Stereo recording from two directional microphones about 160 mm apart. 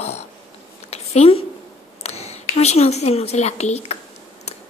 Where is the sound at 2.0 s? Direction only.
40° left (ahead or behind).